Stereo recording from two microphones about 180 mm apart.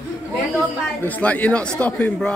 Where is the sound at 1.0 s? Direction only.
10° left (ahead or behind).